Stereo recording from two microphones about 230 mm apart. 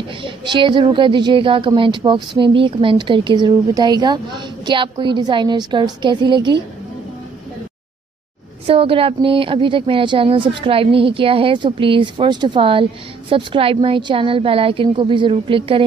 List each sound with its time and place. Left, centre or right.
0.2 s a woman's voice: right
8.6 s a woman's voice: right